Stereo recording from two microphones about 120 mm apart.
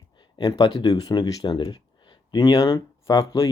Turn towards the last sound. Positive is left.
turn(degrees=30)  # may be behind; listen again after turning